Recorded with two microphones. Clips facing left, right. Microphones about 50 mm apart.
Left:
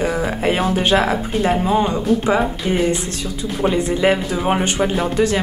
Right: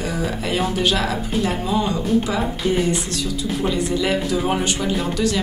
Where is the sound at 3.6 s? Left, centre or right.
Left.